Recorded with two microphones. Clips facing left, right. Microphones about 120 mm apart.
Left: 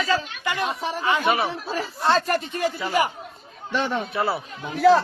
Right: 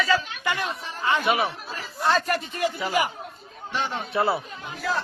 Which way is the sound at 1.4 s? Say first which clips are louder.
Left 6 dB; 80° left.